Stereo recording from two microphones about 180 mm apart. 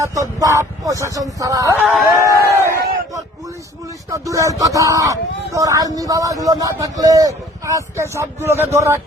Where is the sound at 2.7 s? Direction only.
60° right (ahead or behind).